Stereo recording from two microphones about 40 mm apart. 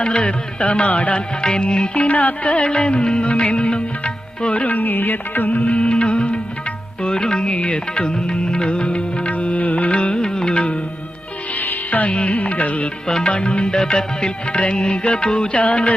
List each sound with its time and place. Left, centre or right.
0.0 s music: left
2.7 s music: left
9.3 s music: left
11.5 s music: left
12.1 s music: left
13.1 s music: centre
13.3 s music: left